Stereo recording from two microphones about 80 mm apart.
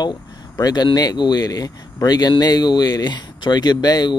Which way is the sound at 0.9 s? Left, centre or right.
Left.